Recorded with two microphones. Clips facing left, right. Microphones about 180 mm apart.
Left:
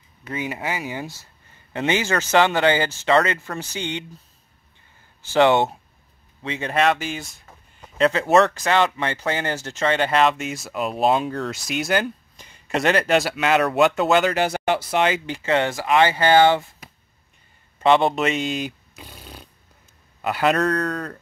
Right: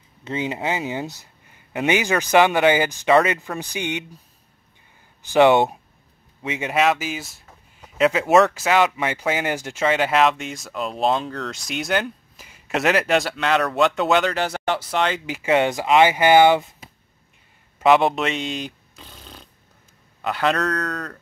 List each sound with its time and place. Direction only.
0.2 s speech: 25° right (ahead or behind)
5.2 s speech: 15° right (ahead or behind); by 14.3 s centre (ahead or behind)
14.3 s speech: 10° left (ahead or behind)
15.2 s speech: 10° right (ahead or behind)
17.7 s a sound: 5° right (ahead or behind)
20.2 s speech: 5° left (ahead or behind)